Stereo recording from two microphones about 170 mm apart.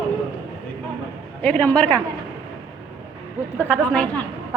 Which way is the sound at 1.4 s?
5° left (ahead or behind).